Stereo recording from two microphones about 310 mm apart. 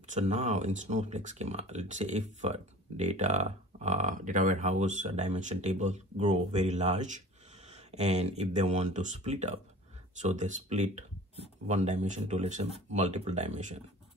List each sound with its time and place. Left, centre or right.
0.1 s speech: right